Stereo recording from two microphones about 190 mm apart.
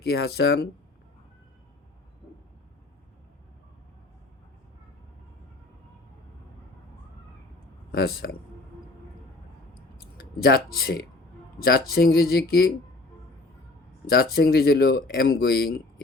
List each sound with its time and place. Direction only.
0.0 s speech: 55° left (ahead or behind)
7.9 s speech: 55° left (ahead or behind)
10.0 s speech: 55° left (ahead or behind)
14.1 s speech: 55° left (ahead or behind)